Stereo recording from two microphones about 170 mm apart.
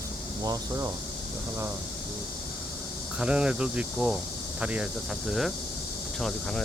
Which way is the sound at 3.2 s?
5° right (ahead or behind).